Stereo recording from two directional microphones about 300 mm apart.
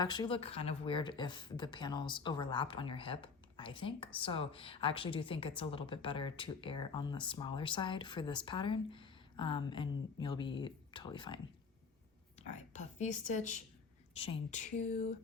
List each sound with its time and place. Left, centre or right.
0.0 s speech: centre
12.4 s speech: left